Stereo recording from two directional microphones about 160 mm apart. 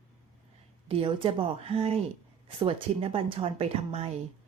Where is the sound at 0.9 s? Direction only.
35° right (ahead or behind).